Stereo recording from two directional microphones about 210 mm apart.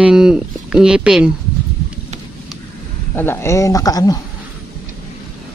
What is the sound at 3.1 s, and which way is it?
Speech, 10° left (ahead or behind).